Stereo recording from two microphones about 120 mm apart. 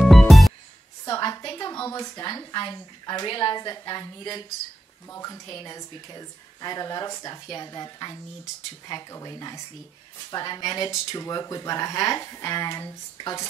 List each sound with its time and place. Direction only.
0.0 s music: centre (ahead or behind)
1.0 s a sound: 30° left (ahead or behind)
1.4 s a woman's voice: 30° left (ahead or behind)